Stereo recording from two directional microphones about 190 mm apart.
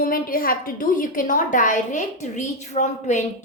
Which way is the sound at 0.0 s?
50° left (ahead or behind).